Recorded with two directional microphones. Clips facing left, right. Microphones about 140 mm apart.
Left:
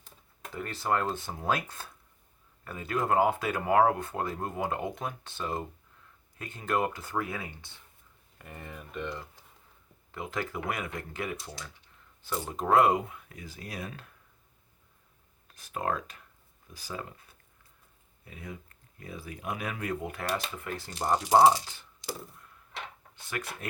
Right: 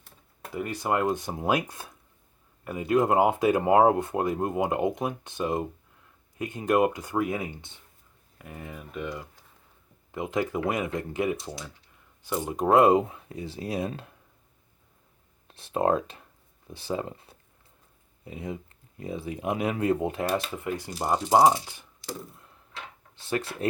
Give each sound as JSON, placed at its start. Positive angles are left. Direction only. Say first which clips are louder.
{"t": 0.5, "sound": "speech", "louder": "right 3 dB", "side_deg": -15}
{"t": 8.4, "sound": "speech", "louder": "right 4 dB", "side_deg": -5}
{"t": 10.1, "sound": "speech", "louder": "right 7 dB", "side_deg": -20}
{"t": 15.4, "sound": "speech", "louder": "right 8 dB", "side_deg": -25}
{"t": 23.3, "sound": "speech", "louder": "right 8 dB", "side_deg": -30}